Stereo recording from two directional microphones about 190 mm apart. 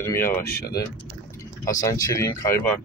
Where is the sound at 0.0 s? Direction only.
15° left (ahead or behind).